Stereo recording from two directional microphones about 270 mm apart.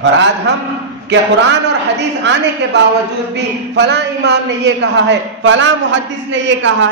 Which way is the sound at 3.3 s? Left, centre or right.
Right.